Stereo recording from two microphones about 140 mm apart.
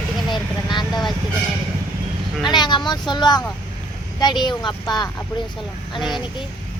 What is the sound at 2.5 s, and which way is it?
Speech, 30° left (ahead or behind).